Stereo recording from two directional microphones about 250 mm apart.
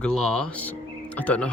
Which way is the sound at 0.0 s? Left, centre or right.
Centre.